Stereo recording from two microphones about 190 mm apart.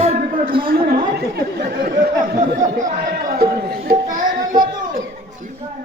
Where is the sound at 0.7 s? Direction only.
55° right (ahead or behind).